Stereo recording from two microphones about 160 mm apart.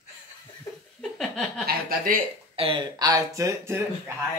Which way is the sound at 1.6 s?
65° right (ahead or behind).